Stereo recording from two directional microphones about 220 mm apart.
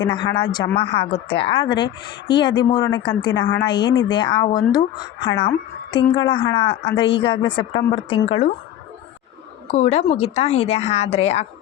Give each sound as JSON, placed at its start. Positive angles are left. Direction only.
{"t": 0.0, "sound": "speech", "side_deg": 20}
{"t": 9.7, "sound": "speech", "side_deg": 30}